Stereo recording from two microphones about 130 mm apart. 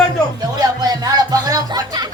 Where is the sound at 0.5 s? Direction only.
30° right (ahead or behind).